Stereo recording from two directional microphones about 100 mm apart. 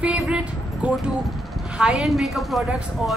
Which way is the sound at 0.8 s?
10° right (ahead or behind).